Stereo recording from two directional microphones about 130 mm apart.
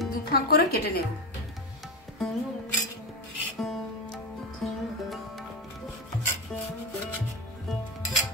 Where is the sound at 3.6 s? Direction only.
Centre (ahead or behind).